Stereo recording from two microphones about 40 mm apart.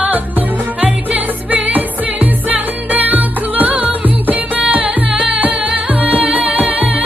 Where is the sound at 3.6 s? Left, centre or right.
Right.